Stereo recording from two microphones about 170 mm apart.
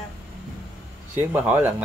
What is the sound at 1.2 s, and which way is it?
Speech, 10° right (ahead or behind).